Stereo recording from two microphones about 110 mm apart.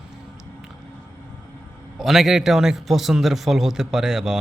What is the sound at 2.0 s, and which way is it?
A man's voice, centre (ahead or behind).